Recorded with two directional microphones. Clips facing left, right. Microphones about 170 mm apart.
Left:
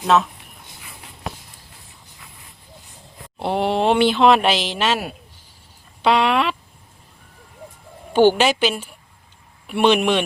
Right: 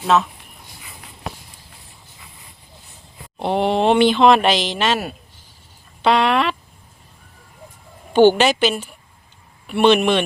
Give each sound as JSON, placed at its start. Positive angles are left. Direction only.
{"t": 0.0, "sound": "speech", "side_deg": 0}
{"t": 1.2, "sound": "run", "side_deg": 0}
{"t": 3.4, "sound": "speech", "side_deg": 5}
{"t": 8.1, "sound": "speech", "side_deg": 10}